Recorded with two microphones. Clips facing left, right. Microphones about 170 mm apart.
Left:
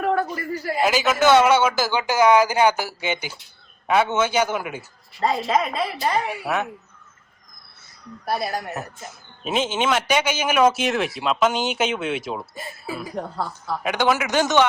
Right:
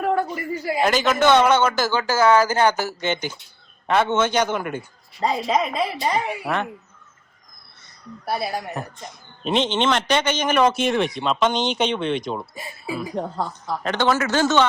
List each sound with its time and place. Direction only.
0.0 s a sound: centre (ahead or behind)
0.6 s a man's voice: centre (ahead or behind)
8.2 s speech: centre (ahead or behind)
13.1 s a woman's voice: 20° right (ahead or behind)
13.5 s a man's voice: 10° left (ahead or behind)